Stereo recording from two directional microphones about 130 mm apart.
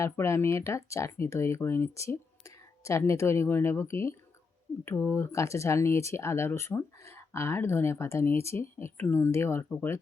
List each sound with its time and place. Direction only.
0.0 s speech: 20° left (ahead or behind)